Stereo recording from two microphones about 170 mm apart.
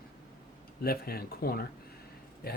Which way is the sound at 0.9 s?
65° left (ahead or behind).